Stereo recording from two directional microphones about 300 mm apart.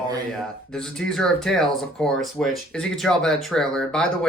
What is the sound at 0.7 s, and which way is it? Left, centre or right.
Speech, centre.